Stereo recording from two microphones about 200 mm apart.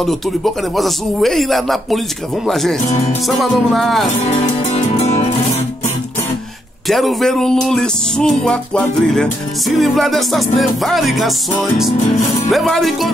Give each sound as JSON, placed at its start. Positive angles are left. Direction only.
{"t": 0.0, "sound": "music", "side_deg": 0}
{"t": 4.2, "sound": "music", "side_deg": 35}
{"t": 6.9, "sound": "music", "side_deg": 0}
{"t": 12.4, "sound": "music", "side_deg": 0}